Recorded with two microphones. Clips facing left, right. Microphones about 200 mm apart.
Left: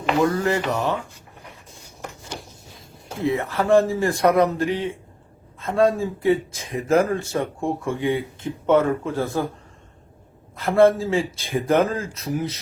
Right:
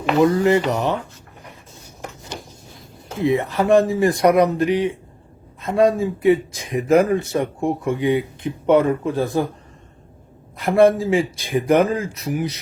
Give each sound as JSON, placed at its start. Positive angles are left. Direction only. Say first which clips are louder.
{"t": 0.2, "sound": "speech", "louder": "right 6 dB", "side_deg": -20}
{"t": 3.2, "sound": "speech", "louder": "right 4 dB", "side_deg": -15}
{"t": 10.6, "sound": "speech", "louder": "right 2 dB", "side_deg": -15}